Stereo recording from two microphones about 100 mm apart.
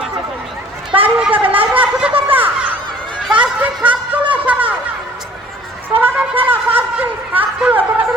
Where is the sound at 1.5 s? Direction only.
65° right (ahead or behind).